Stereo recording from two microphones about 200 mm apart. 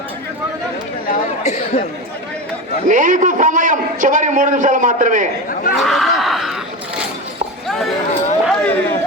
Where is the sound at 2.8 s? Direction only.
40° right (ahead or behind).